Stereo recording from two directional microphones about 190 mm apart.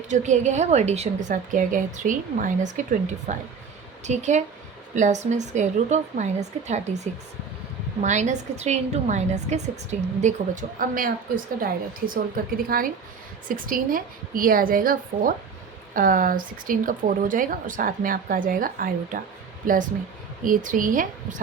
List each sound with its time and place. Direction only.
0.1 s a woman's voice: 40° right (ahead or behind)